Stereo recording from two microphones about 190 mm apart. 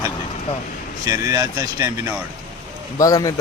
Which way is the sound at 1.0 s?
15° right (ahead or behind).